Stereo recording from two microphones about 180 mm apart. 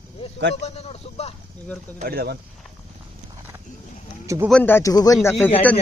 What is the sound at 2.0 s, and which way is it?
Speech, 55° right (ahead or behind).